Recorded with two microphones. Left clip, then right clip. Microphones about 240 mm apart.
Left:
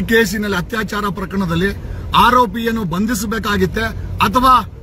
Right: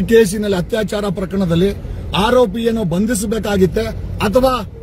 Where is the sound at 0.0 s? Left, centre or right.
Centre.